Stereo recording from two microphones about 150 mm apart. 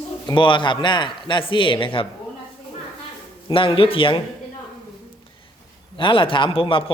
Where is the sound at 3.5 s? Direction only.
35° left (ahead or behind).